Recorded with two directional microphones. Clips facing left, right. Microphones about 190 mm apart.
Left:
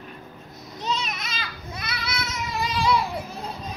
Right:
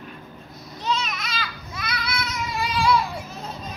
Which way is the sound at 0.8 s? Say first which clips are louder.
Right 2 dB; 25° left (ahead or behind).